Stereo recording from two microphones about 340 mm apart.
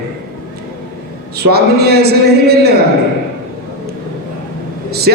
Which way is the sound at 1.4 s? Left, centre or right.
Right.